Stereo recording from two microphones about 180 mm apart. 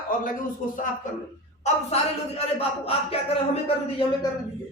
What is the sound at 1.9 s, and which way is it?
Speech, 35° left (ahead or behind).